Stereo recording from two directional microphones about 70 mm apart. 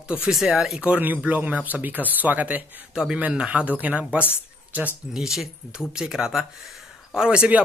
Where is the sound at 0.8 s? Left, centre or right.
Right.